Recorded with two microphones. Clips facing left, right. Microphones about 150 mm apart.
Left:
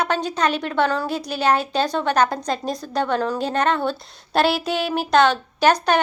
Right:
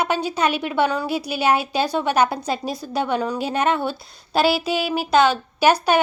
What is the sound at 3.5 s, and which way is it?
A woman's voice, 10° right (ahead or behind).